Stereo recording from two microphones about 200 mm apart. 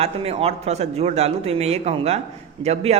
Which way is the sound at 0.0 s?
30° right (ahead or behind).